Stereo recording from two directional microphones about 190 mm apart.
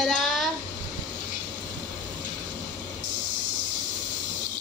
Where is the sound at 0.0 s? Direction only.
Centre (ahead or behind).